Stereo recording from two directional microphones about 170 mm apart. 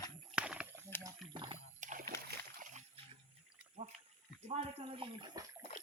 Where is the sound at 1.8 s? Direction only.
50° right (ahead or behind).